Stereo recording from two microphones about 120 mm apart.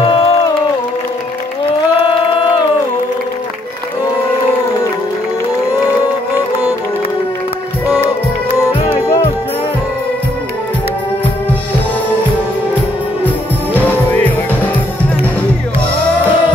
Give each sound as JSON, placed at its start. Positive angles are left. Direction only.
{"t": 0.0, "sound": "music", "side_deg": 50}
{"t": 13.7, "sound": "music", "side_deg": 15}